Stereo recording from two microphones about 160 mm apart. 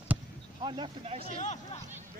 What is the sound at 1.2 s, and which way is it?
Speech, 45° left (ahead or behind).